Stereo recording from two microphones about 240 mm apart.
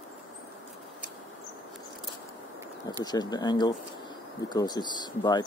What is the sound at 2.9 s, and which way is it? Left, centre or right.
Speech, centre.